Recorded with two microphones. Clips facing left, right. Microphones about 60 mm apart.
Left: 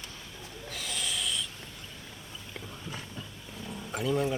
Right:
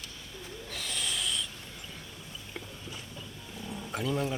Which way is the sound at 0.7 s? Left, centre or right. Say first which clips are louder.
Left 1 dB; centre.